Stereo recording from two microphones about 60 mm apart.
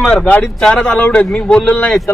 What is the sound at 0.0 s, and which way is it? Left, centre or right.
A man's voice, centre.